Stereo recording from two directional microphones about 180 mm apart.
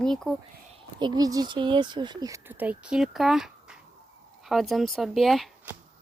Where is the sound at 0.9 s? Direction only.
25° right (ahead or behind); by 5.5 s centre (ahead or behind).